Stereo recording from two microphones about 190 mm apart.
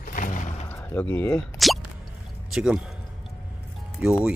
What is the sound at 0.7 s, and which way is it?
Speech, 10° left (ahead or behind).